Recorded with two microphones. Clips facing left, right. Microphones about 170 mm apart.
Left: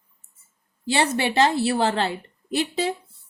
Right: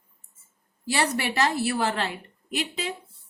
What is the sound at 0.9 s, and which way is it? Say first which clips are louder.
A woman's voice: left 4 dB; 25° left (ahead or behind).